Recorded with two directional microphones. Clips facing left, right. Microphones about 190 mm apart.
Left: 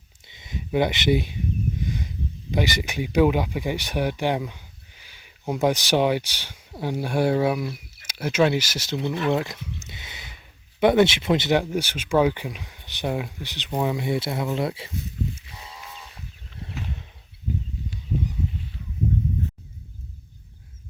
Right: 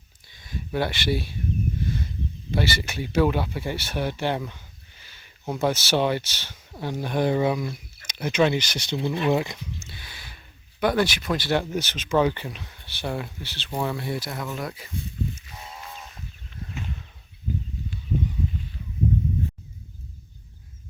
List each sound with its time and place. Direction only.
0.3 s speech: 20° left (ahead or behind); by 9.6 s centre (ahead or behind)
9.8 s a sound: 20° left (ahead or behind)
10.8 s speech: 25° left (ahead or behind)